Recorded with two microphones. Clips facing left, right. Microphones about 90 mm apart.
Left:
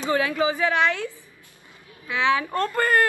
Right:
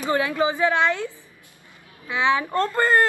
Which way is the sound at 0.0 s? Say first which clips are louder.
Right 1 dB; 20° right (ahead or behind).